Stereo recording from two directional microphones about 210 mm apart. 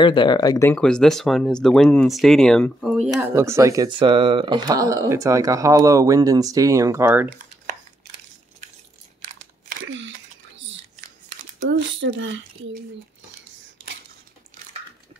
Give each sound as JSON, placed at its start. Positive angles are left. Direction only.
{"t": 0.0, "sound": "speech", "side_deg": 20}
{"t": 3.2, "sound": "speech", "side_deg": -15}
{"t": 9.8, "sound": "a sound", "side_deg": -60}
{"t": 11.7, "sound": "speech", "side_deg": -60}